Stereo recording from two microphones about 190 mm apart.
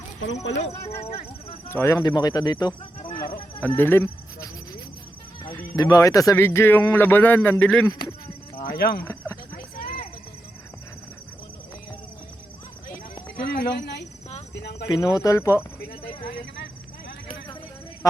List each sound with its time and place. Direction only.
0.5 s speech: 80° left
1.7 s speech: 15° left (ahead or behind)
3.8 s speech: 10° left (ahead or behind)
8.7 s speech: 55° left (ahead or behind)
9.0 s cricket: 15° left (ahead or behind)
9.6 s a sound: 50° left (ahead or behind)
13.3 s a sound: 55° left (ahead or behind)
14.5 s speech: 60° left (ahead or behind)
14.8 s speech: 20° left (ahead or behind)
18.0 s speech: 15° left (ahead or behind)